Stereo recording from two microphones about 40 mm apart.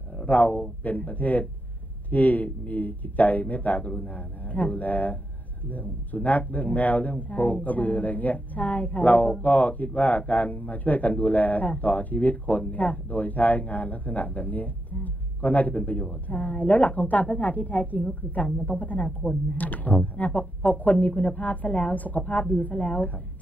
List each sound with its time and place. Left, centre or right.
0.3 s speech: left